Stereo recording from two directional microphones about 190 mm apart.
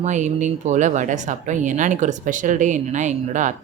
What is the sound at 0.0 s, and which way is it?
Speech, 40° right (ahead or behind).